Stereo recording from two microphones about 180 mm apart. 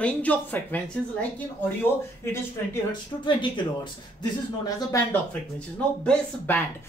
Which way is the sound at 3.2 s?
25° left (ahead or behind).